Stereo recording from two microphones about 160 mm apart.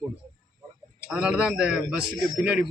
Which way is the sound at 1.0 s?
5° right (ahead or behind).